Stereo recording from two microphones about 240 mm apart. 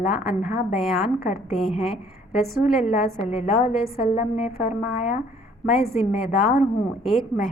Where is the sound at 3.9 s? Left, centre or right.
Left.